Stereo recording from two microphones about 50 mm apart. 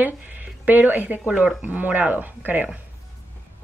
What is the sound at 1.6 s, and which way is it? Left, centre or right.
Speech, right.